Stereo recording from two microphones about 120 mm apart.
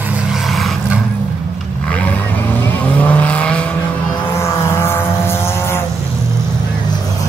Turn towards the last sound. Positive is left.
turn(degrees=20)  # may be behind; listen again after turning